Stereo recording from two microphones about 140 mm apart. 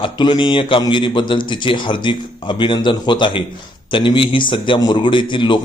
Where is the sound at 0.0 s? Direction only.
35° left (ahead or behind).